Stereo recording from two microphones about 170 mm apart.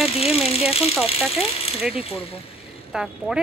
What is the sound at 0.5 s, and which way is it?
Ratchet, 35° left (ahead or behind).